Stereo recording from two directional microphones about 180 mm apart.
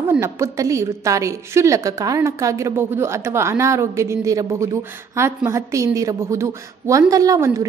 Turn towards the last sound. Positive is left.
turn(degrees=-15)  # may be behind; listen again after turning